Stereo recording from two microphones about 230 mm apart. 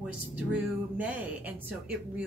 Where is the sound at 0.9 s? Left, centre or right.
Centre.